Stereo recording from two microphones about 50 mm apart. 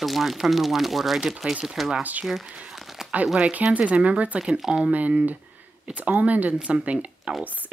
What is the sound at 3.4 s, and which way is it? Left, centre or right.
Speech, right.